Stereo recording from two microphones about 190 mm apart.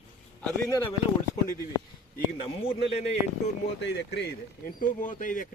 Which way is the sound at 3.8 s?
65° left (ahead or behind).